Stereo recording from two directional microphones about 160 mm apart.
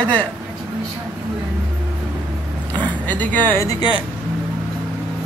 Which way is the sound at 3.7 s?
30° left (ahead or behind).